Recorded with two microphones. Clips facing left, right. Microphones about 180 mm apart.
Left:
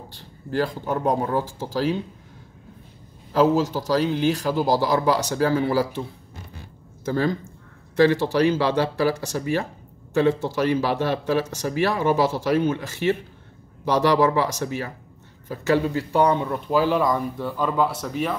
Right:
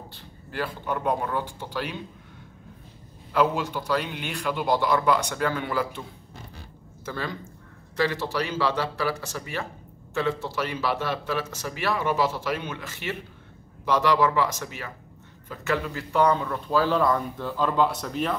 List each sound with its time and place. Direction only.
0.5 s speech: 40° left (ahead or behind)
3.3 s speech: 40° left (ahead or behind)
7.1 s speech: 40° left (ahead or behind); by 18.4 s centre (ahead or behind)